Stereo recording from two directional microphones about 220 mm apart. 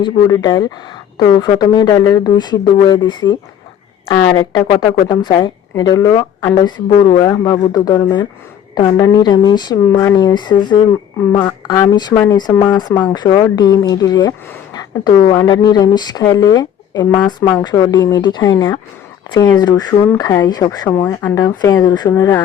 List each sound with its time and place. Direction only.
0.0 s speech: 20° left (ahead or behind)